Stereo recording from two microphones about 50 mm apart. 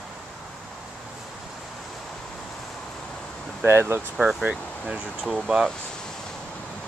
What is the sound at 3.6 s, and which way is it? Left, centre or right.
Speech, right.